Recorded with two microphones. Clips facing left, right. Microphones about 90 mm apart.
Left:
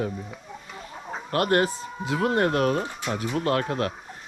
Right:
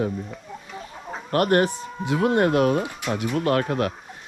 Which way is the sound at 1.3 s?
35° right (ahead or behind).